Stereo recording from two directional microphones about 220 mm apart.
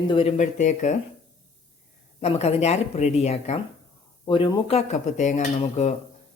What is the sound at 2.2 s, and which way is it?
Dishes, 30° left (ahead or behind).